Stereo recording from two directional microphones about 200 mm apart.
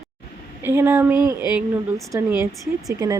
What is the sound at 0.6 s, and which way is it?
Speech, 10° right (ahead or behind).